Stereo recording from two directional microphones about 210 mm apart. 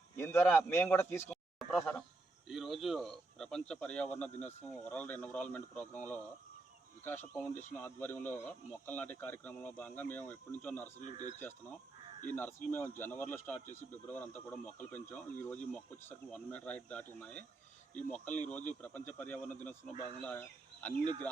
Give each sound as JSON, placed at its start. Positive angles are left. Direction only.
{"t": 0.2, "sound": "speech", "side_deg": 10}
{"t": 11.0, "sound": "speech", "side_deg": 35}
{"t": 12.3, "sound": "speech", "side_deg": 10}
{"t": 21.0, "sound": "speech", "side_deg": -20}